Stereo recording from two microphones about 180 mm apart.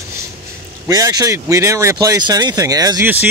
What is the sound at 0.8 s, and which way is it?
Speech, 20° right (ahead or behind).